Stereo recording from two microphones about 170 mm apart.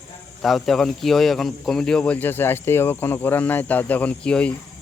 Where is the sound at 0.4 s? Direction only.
Centre (ahead or behind).